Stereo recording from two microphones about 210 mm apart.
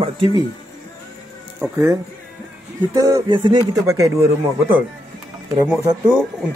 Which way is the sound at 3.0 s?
15° right (ahead or behind).